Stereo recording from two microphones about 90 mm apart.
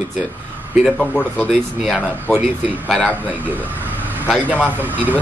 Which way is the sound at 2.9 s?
15° left (ahead or behind).